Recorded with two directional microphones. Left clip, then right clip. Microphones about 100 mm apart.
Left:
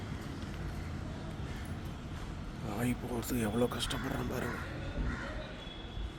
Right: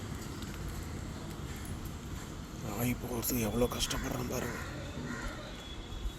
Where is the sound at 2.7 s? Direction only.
15° left (ahead or behind).